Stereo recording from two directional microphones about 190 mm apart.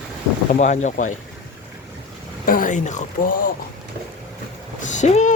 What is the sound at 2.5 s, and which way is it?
Speech, 45° left (ahead or behind).